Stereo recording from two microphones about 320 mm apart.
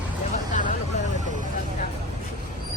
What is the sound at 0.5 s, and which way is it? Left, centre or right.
Hubbub, left.